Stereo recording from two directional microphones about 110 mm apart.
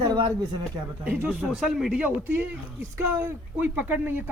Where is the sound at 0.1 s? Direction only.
35° right (ahead or behind).